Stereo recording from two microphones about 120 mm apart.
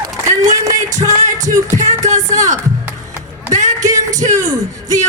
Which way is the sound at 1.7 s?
85° right.